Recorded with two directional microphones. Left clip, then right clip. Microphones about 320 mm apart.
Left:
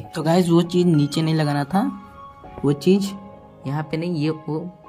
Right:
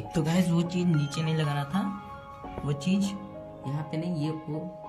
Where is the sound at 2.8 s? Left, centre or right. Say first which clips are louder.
Left 12 dB; left.